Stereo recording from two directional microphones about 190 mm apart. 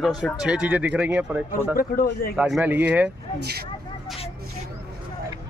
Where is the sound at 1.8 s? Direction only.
50° left (ahead or behind).